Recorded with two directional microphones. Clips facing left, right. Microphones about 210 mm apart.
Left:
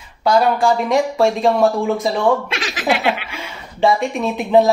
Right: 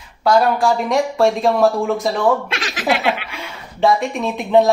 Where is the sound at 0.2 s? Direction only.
Centre (ahead or behind).